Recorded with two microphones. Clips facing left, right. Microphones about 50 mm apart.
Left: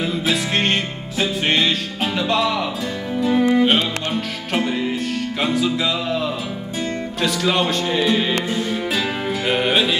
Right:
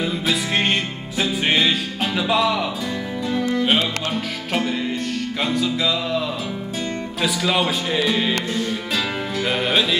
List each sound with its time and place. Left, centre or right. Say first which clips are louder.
0.0 s music: left 1 dB; centre
3.3 s music: left 6 dB; centre
3.6 s music: left 2 dB; centre